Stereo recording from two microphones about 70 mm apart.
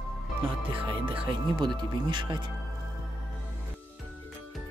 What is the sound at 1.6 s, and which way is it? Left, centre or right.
Speech, right.